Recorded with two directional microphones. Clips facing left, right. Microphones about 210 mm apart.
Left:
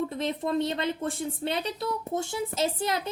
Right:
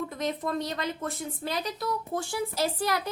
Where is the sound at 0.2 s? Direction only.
25° left (ahead or behind).